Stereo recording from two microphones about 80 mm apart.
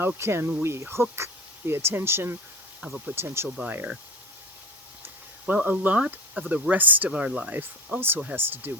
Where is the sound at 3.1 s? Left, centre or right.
Right.